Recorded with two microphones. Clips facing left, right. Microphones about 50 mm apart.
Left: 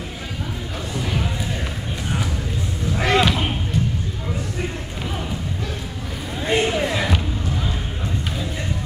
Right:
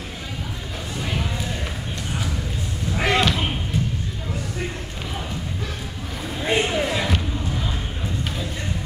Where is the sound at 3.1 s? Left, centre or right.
Centre.